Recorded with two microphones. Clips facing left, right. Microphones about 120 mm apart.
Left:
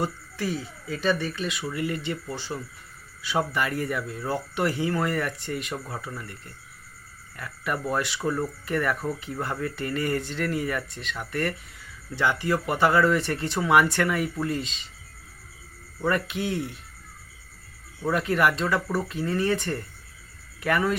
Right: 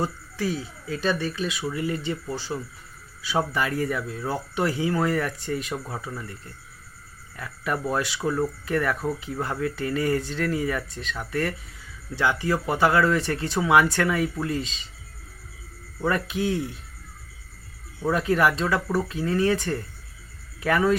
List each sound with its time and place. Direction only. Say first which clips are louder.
0.5 s speech: right 1 dB; centre (ahead or behind)
7.9 s speech: right 2 dB; 5° right (ahead or behind)
9.3 s speech: right 2 dB; 10° right (ahead or behind)
16.0 s speech: right 1 dB; 5° right (ahead or behind)
18.2 s speech: right 2 dB; centre (ahead or behind)